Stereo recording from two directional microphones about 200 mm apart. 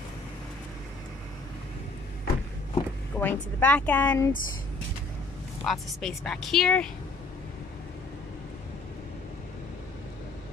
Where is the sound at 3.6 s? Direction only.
10° left (ahead or behind).